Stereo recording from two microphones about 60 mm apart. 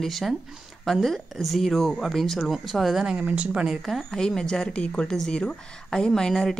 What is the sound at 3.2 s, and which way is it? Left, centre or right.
Speech, right.